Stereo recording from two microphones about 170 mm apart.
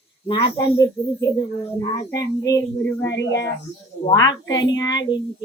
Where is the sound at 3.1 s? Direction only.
90° left.